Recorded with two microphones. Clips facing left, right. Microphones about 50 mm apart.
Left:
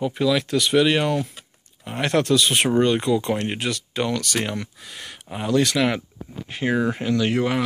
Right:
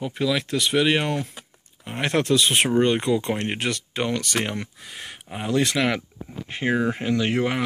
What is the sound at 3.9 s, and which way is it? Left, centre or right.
Speech, right.